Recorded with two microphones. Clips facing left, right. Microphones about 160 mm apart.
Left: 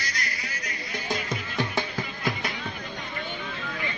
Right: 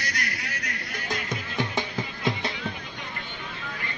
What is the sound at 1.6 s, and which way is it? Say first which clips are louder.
Music: even; 20° right (ahead or behind).